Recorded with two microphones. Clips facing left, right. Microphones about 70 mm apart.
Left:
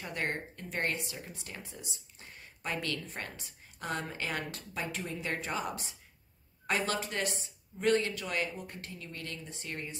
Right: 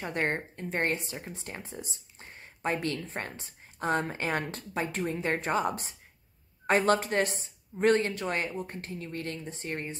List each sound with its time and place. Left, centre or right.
0.0 s speech: right